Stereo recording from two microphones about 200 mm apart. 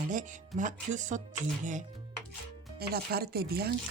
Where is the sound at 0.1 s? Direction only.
40° right (ahead or behind).